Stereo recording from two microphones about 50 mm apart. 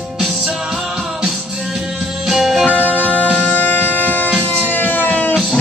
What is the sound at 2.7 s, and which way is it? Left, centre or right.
Music, right.